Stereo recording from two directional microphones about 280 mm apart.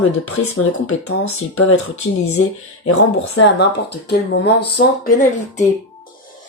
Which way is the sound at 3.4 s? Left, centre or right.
Left.